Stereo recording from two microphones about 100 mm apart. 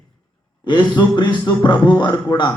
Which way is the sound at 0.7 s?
45° left (ahead or behind).